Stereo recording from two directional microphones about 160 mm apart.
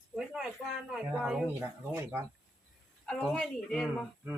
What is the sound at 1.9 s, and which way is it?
Speech, 15° right (ahead or behind).